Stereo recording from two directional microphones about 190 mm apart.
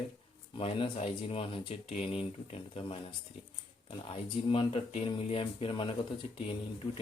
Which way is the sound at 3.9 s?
30° left (ahead or behind).